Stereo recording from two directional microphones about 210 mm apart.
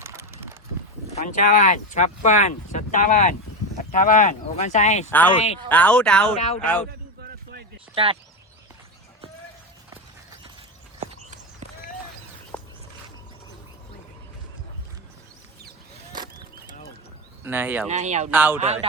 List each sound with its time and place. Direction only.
0.0 s a sound: 10° right (ahead or behind)
1.1 s speech: 40° left (ahead or behind)
5.0 s speech: 10° left (ahead or behind)
6.3 s speech: 30° left (ahead or behind)
11.0 s walk: 35° right (ahead or behind)
11.6 s run: 35° right (ahead or behind)
12.5 s a sound: 5° left (ahead or behind)
16.1 s a sound: 20° right (ahead or behind)
17.4 s speech: 10° right (ahead or behind)
17.8 s speech: 35° right (ahead or behind)
18.3 s speech: 10° right (ahead or behind)
18.6 s speech: 30° right (ahead or behind)